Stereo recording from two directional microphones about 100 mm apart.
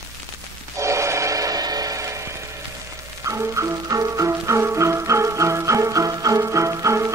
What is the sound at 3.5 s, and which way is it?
Music, 30° right (ahead or behind).